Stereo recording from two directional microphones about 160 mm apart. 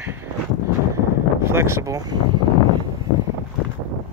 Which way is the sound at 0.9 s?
15° right (ahead or behind).